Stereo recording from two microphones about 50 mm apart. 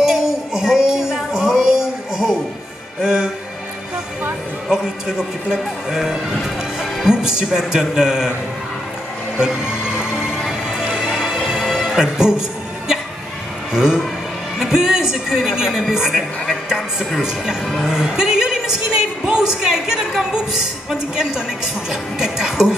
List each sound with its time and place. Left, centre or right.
0.0 s music: centre
4.6 s speech: centre
9.4 s music: centre
11.6 s music: centre
11.9 s a sound: centre
13.7 s a woman's voice: centre